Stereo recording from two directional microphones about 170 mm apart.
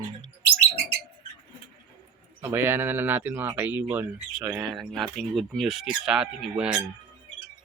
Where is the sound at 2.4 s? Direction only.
15° right (ahead or behind).